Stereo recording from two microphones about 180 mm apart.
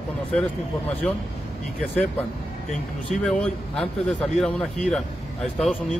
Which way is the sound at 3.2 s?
5° left (ahead or behind).